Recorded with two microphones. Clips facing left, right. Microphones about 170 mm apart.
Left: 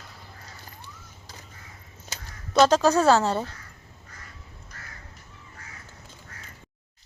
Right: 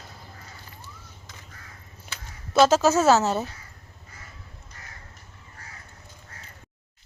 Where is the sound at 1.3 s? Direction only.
35° left (ahead or behind).